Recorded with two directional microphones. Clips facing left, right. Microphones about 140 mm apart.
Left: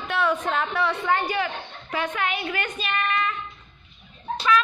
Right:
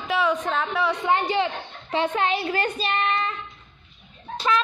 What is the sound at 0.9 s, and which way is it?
A man's voice, 20° right (ahead or behind).